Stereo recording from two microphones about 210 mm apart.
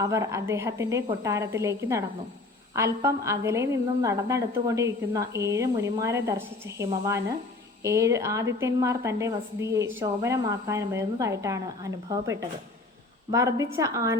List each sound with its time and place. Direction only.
0.0 s a woman's voice: 15° right (ahead or behind)